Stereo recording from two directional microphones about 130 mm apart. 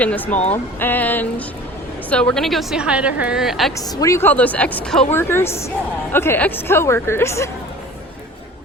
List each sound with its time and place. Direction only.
0.0 s a woman's voice: 10° left (ahead or behind)
3.8 s a woman's voice: 25° left (ahead or behind); by 5.0 s 5° left (ahead or behind)
5.1 s a woman's voice: 20° left (ahead or behind)